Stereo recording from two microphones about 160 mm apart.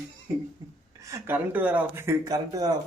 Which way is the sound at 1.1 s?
10° right (ahead or behind).